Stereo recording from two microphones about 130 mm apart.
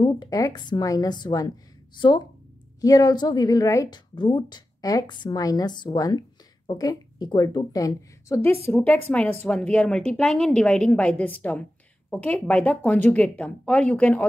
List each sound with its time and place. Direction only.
0.0 s a woman's voice: 30° left (ahead or behind)
8.4 s a woman's voice: 15° left (ahead or behind)